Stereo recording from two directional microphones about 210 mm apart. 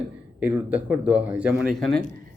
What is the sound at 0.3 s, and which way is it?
Speech, 10° right (ahead or behind).